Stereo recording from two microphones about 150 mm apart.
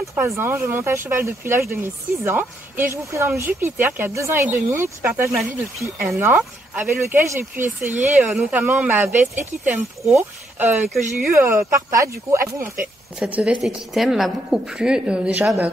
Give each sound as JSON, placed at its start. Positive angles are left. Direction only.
{"t": 0.1, "sound": "a woman's voice", "side_deg": -15}